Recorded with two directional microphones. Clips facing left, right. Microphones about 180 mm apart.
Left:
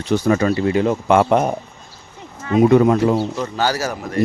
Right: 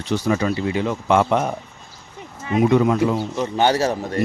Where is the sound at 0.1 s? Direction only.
50° left (ahead or behind).